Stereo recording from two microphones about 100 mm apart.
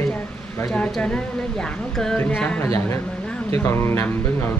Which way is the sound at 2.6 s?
25° left (ahead or behind).